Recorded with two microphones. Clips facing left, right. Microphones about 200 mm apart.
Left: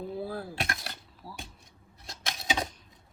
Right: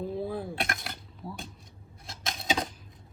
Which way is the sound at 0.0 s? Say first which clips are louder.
Right 3 dB; centre (ahead or behind).